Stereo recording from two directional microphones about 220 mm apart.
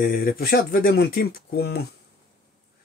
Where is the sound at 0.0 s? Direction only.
40° left (ahead or behind).